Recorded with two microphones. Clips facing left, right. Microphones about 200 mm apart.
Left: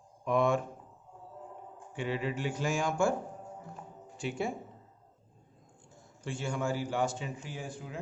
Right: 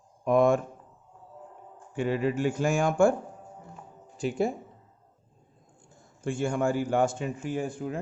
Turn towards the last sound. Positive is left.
turn(degrees=-50)  # may be behind; listen again after turning